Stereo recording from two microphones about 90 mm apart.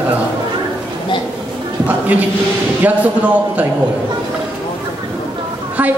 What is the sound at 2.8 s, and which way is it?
Speech, 15° right (ahead or behind).